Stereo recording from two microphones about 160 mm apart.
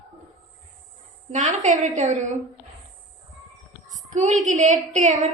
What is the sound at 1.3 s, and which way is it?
A woman's voice, 50° right (ahead or behind).